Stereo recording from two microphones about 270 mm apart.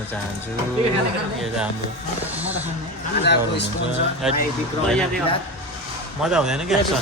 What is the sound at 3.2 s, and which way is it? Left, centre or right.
Speech, left.